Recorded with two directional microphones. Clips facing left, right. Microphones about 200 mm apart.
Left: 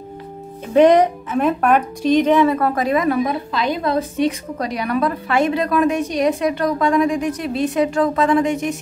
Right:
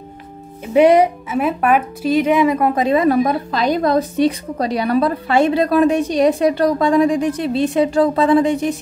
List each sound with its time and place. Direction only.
0.7 s speech: 10° right (ahead or behind); by 8.7 s 35° right (ahead or behind)